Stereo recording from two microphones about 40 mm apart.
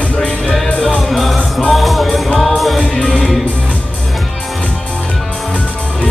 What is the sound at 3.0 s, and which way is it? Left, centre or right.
Music, left.